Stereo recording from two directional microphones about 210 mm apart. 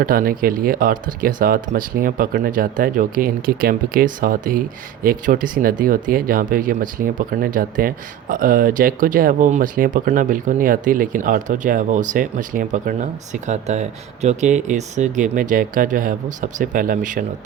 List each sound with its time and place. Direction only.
0.0 s speech: 45° right (ahead or behind)